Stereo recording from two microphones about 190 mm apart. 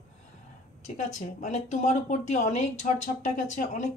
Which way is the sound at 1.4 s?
35° left (ahead or behind).